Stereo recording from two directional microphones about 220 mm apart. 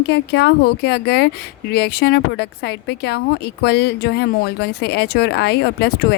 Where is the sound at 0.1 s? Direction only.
50° left (ahead or behind).